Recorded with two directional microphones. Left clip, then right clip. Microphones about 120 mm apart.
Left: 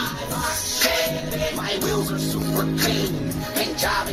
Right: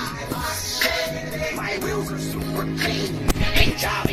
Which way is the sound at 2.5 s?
40° left (ahead or behind).